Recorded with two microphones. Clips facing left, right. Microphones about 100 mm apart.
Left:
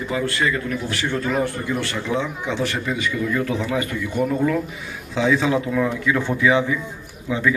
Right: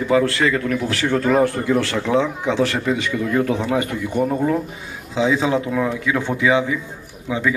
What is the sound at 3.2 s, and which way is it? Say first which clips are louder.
Speech: right 2 dB; 55° right (ahead or behind).